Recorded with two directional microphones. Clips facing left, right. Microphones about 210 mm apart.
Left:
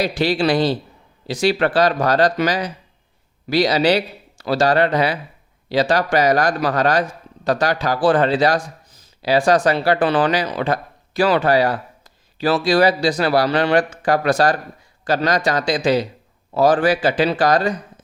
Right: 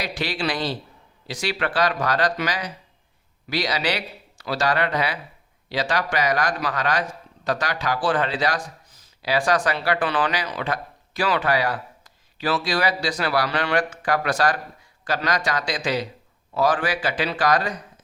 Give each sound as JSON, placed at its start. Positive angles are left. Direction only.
{"t": 0.0, "sound": "speech", "side_deg": 30}